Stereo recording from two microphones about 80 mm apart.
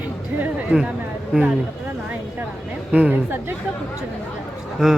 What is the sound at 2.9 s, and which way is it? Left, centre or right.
Speech, centre.